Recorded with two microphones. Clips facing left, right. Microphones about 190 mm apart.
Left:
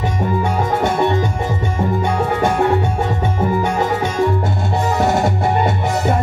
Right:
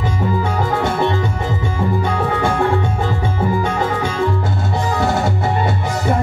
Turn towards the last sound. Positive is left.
turn(degrees=20)  # may be behind; listen again after turning